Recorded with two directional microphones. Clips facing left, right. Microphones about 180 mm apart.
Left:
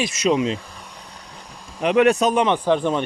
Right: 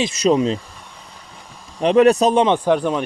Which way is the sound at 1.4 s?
Centre (ahead or behind).